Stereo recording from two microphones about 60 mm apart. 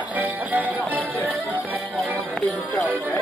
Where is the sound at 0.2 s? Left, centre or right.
Right.